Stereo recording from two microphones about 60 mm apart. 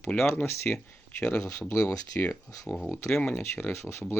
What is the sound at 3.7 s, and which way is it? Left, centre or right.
Speech, left.